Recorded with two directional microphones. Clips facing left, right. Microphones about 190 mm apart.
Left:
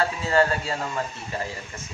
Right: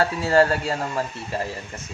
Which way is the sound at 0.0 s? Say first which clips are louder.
Right 3 dB; 40° right (ahead or behind).